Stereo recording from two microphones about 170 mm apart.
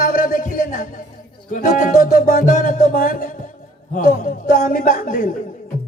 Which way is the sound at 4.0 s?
50° left (ahead or behind).